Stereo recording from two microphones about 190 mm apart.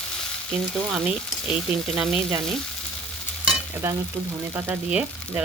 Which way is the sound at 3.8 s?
10° right (ahead or behind).